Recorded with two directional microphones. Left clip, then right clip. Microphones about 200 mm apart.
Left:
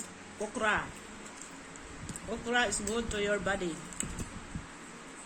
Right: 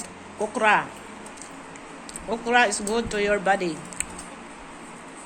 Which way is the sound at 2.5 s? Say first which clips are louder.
Right 10 dB; 15° left (ahead or behind).